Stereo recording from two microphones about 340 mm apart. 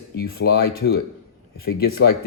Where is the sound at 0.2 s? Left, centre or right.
Left.